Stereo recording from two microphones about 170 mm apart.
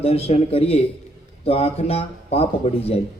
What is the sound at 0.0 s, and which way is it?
A man's voice, 35° left (ahead or behind).